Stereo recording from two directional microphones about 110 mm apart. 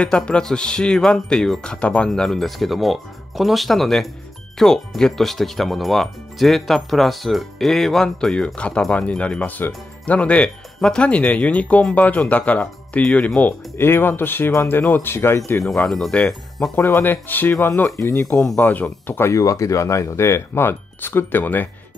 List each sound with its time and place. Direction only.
0.0 s speech: 10° left (ahead or behind)
15.6 s speech: 5° left (ahead or behind)